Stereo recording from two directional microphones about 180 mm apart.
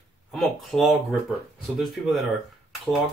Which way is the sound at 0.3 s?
Centre (ahead or behind).